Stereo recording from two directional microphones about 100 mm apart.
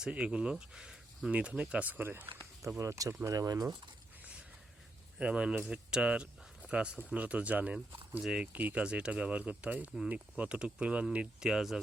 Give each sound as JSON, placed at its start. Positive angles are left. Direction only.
{"t": 0.0, "sound": "speech", "side_deg": -10}
{"t": 2.6, "sound": "speech", "side_deg": -30}
{"t": 5.2, "sound": "speech", "side_deg": -10}